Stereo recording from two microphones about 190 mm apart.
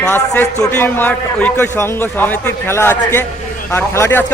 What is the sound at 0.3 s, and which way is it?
A man's voice, 10° left (ahead or behind).